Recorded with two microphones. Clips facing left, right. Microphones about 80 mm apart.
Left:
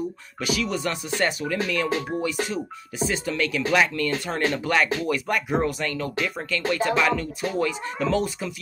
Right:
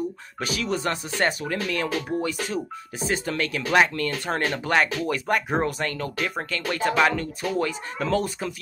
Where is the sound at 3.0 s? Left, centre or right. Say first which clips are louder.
Even; right.